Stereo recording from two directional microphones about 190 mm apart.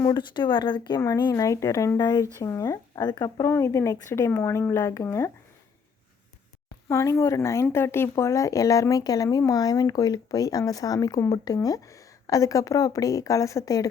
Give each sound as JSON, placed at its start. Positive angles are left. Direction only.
{"t": 0.0, "sound": "speech", "side_deg": 20}
{"t": 6.8, "sound": "speech", "side_deg": 15}